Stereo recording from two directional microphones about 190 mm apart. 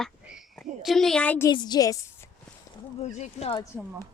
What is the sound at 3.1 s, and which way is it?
Speech, 35° left (ahead or behind).